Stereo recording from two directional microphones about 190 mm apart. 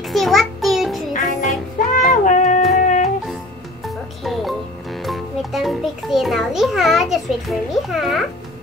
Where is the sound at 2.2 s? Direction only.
40° left (ahead or behind).